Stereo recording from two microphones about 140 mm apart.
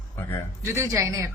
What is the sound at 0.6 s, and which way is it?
Speech, 20° right (ahead or behind).